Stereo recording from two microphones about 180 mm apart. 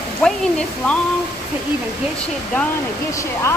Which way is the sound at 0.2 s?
5° left (ahead or behind).